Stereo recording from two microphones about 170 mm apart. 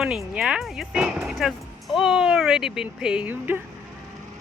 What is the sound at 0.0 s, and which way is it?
Speech, centre (ahead or behind).